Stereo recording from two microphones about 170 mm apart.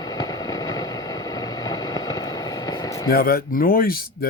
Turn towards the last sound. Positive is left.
turn(degrees=60)  # may be behind; listen again after turning